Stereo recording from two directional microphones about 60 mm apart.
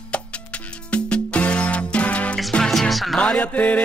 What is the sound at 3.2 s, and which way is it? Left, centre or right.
Music, left.